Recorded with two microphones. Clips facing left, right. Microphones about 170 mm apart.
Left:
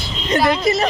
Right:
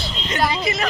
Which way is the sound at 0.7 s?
40° left (ahead or behind).